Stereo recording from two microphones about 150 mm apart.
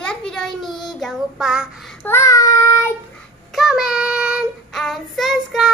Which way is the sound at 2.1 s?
20° left (ahead or behind).